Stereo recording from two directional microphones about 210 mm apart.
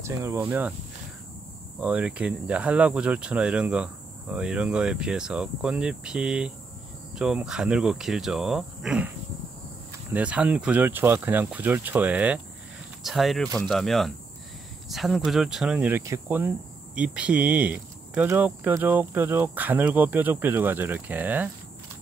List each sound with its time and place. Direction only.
0.0 s cricket: 15° right (ahead or behind)
1.8 s speech: 5° right (ahead or behind)
10.1 s cricket: 5° right (ahead or behind)
13.0 s speech: centre (ahead or behind)
14.9 s cricket: centre (ahead or behind)